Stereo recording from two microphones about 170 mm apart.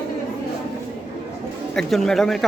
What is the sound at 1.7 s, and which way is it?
Speech, 5° left (ahead or behind).